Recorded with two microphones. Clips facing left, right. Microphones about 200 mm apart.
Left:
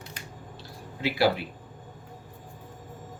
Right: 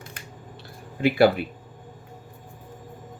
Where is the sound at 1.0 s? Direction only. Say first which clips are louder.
Right 6 dB; 55° right (ahead or behind).